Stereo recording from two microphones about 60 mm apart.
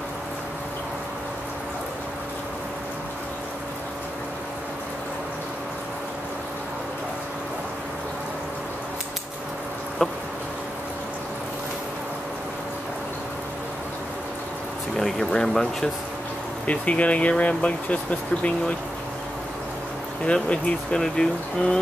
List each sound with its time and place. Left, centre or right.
10.0 s a sound: centre
15.0 s speech: centre
16.6 s speech: left
20.2 s speech: centre